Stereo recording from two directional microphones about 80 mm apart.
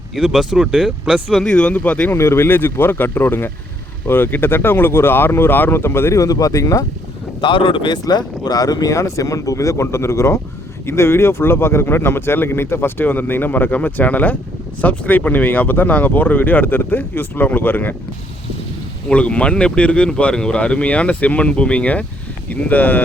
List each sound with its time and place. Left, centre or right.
0.2 s speech: centre
1.4 s speech: centre
2.1 s speech: left
7.4 s speech: left
8.0 s speech: left
19.0 s speech: centre